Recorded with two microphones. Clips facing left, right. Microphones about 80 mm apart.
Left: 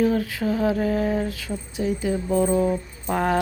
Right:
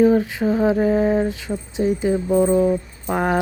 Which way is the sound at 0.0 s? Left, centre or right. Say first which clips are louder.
Right 6 dB; right.